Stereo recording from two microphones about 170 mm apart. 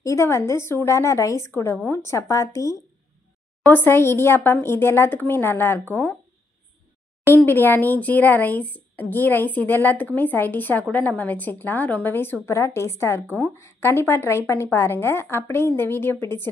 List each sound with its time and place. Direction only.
0.0 s speech: 15° left (ahead or behind)
7.2 s speech: 15° left (ahead or behind)